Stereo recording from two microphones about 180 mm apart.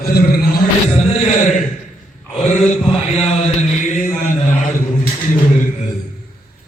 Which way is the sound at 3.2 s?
35° left (ahead or behind).